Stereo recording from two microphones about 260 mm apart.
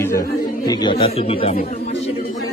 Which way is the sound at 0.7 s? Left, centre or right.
Centre.